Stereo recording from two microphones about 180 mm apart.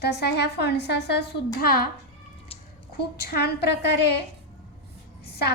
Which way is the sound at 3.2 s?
60° left (ahead or behind).